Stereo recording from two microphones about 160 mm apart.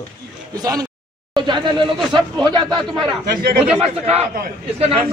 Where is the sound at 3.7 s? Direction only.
40° right (ahead or behind).